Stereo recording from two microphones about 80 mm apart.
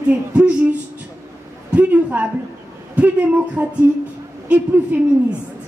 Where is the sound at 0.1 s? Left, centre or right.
Centre.